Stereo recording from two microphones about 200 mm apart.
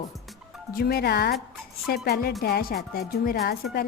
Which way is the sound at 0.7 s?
50° left (ahead or behind).